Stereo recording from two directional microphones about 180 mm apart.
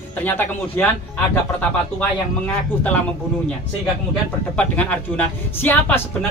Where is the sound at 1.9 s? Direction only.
5° left (ahead or behind).